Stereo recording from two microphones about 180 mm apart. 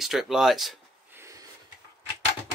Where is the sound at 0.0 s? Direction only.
Centre (ahead or behind).